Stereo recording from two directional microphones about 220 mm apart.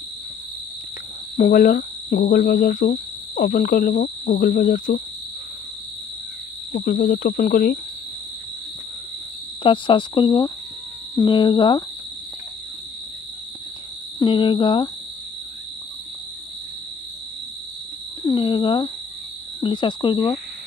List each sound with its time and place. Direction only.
1.3 s speech: 35° left (ahead or behind)
6.7 s speech: 35° left (ahead or behind)
9.6 s speech: 25° left (ahead or behind)
14.2 s speech: 20° left (ahead or behind)
18.2 s speech: 20° left (ahead or behind)